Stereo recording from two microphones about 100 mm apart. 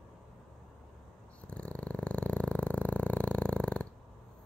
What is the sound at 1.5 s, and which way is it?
Purr, 10° left (ahead or behind).